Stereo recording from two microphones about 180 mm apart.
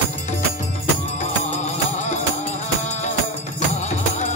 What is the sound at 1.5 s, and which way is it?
Music, 40° left (ahead or behind).